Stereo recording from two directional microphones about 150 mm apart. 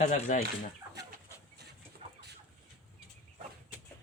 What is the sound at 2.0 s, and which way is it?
Chicken, 45° right (ahead or behind).